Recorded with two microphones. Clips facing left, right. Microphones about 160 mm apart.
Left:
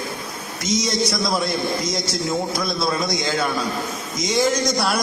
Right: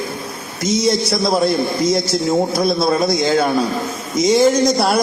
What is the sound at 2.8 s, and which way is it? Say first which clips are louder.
Speech: right 4 dB; 50° right (ahead or behind).